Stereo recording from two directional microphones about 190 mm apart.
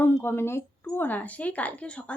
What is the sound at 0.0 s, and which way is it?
Speech, 10° left (ahead or behind).